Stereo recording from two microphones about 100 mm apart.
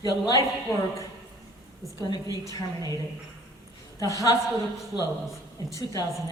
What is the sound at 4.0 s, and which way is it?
Speech, 35° left (ahead or behind).